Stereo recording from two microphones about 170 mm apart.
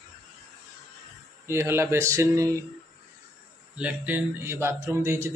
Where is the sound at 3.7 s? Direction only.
10° right (ahead or behind).